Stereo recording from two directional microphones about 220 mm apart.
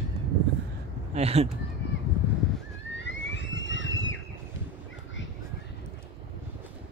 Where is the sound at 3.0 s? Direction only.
55° left (ahead or behind).